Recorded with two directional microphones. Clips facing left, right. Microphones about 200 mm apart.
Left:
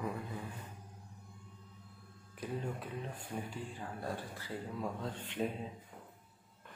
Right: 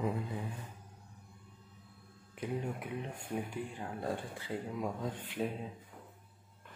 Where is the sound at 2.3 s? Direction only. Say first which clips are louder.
Right 2 dB; 15° right (ahead or behind).